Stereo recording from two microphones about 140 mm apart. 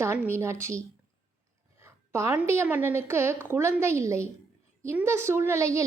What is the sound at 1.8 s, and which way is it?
A woman's voice, 20° right (ahead or behind).